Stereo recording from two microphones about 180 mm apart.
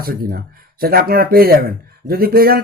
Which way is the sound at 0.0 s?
55° right (ahead or behind).